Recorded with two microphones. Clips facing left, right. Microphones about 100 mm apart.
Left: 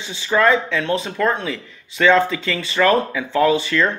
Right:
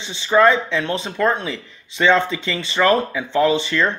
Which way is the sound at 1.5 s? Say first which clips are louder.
Left 1 dB; 20° right (ahead or behind).